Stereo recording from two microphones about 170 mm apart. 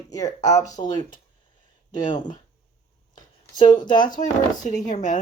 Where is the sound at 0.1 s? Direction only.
20° left (ahead or behind).